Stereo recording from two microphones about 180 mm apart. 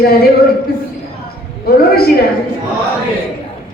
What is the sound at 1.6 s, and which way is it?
Speech, 60° left (ahead or behind).